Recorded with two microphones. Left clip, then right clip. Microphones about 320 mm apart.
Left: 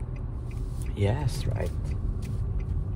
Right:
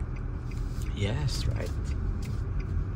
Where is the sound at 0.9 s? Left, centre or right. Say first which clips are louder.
Left 5 dB; centre.